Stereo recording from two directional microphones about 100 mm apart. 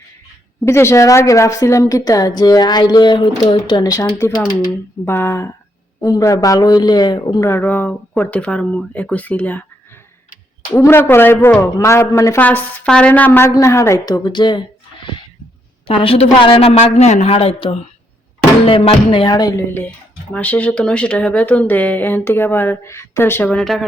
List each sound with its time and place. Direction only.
0.6 s a woman's voice: 25° left (ahead or behind)
5.0 s a woman's voice: 25° left (ahead or behind); by 7.4 s 45° left (ahead or behind)
7.4 s speech: 20° left (ahead or behind)
10.8 s a woman's voice: 25° left (ahead or behind)
12.4 s a woman's voice: 15° left (ahead or behind); by 14.6 s 50° left (ahead or behind)
15.9 s a woman's voice: 65° left (ahead or behind)
19.3 s a woman's voice: 40° left (ahead or behind)
20.3 s speech: 15° left (ahead or behind)
23.6 s speech: centre (ahead or behind)